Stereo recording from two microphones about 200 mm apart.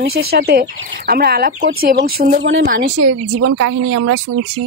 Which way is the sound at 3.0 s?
90° right.